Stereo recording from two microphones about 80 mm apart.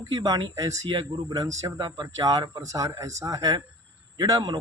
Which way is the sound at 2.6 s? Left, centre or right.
Right.